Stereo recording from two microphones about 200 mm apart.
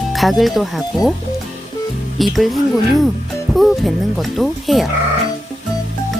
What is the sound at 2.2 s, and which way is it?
Speech, centre (ahead or behind).